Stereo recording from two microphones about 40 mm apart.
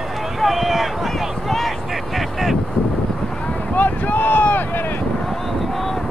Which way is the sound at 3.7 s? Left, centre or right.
Left.